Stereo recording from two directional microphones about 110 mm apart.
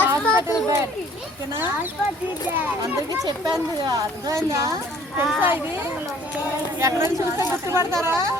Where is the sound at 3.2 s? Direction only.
35° right (ahead or behind).